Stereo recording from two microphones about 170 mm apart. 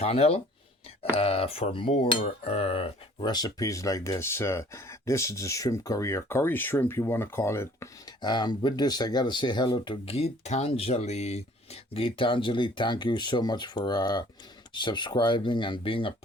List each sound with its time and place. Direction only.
0.0 s cutlery: 35° left (ahead or behind)
2.2 s speech: 40° left (ahead or behind)